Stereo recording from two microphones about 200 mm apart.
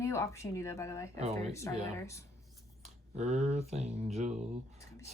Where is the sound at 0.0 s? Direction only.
15° left (ahead or behind).